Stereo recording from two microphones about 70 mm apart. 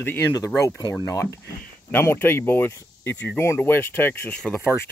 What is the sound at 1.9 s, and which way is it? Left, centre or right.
Speech, left.